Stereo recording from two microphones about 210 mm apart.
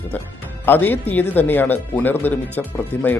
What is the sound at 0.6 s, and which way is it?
Speech, 10° left (ahead or behind).